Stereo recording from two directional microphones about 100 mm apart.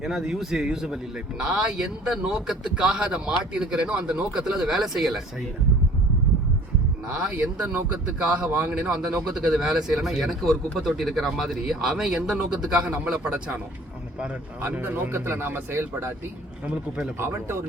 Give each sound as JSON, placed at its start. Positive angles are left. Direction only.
{"t": 0.0, "sound": "a man's voice", "side_deg": -5}
{"t": 7.1, "sound": "a man's voice", "side_deg": -10}
{"t": 14.7, "sound": "speech", "side_deg": -20}
{"t": 17.2, "sound": "speech", "side_deg": -25}